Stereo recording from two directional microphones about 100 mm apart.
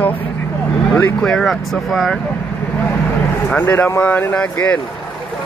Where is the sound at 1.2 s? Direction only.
5° left (ahead or behind).